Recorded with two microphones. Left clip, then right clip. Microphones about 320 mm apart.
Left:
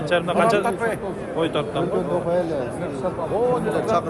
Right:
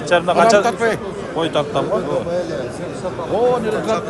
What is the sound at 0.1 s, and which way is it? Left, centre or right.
Speech, centre.